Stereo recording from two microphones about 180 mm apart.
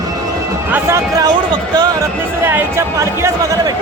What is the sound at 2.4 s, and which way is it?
Speech, 10° right (ahead or behind).